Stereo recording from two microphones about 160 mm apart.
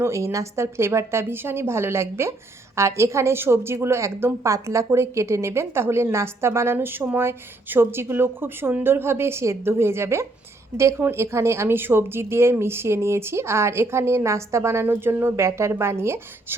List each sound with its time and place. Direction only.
0.0 s a woman's voice: 20° right (ahead or behind)